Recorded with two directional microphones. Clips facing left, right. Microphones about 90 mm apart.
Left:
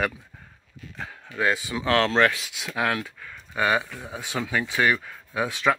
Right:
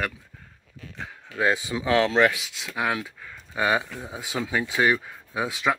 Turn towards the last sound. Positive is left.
turn(degrees=-15)  # may be behind; listen again after turning